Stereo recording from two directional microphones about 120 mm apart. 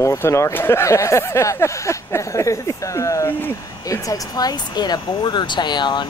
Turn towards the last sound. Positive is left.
turn(degrees=40)  # may be behind; listen again after turning